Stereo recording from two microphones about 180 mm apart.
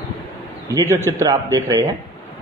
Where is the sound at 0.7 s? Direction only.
15° right (ahead or behind).